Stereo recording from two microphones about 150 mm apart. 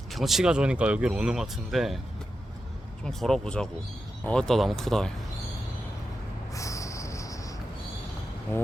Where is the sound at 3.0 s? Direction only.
5° left (ahead or behind).